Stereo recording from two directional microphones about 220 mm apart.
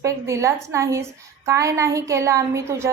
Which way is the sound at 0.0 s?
15° right (ahead or behind).